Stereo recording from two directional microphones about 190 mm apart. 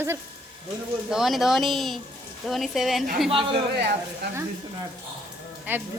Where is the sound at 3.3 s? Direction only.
30° right (ahead or behind).